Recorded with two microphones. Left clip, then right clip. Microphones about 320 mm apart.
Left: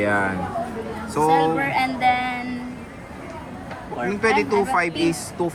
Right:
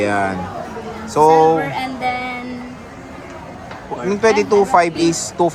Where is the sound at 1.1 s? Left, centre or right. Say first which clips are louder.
Right 7 dB; centre.